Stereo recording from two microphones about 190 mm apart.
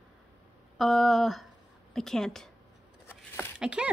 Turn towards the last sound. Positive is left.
turn(degrees=-5)  # may be behind; listen again after turning